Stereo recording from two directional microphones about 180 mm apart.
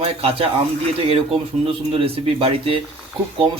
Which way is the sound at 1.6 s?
30° right (ahead or behind).